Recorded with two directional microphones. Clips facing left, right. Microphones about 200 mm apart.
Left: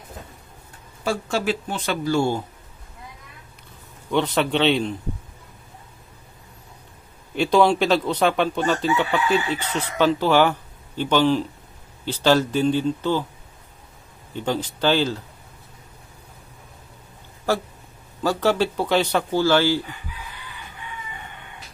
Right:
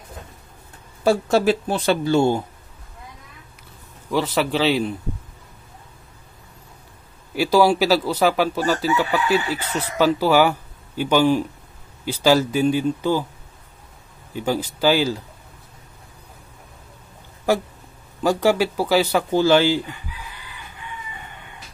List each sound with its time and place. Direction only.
1.0 s speech: 40° right (ahead or behind)
2.0 s speech: 20° right (ahead or behind)
4.1 s a man's voice: 5° right (ahead or behind)
7.3 s a man's voice: 5° right (ahead or behind)
14.3 s speech: 10° right (ahead or behind)
18.2 s speech: 15° right (ahead or behind)